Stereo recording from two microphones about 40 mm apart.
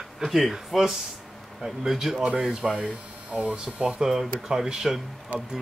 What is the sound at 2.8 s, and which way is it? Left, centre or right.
Speech, right.